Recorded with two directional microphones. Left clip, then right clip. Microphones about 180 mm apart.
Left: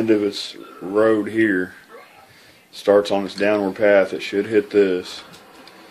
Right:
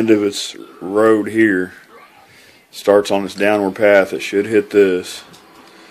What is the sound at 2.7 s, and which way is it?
Speech, 30° right (ahead or behind).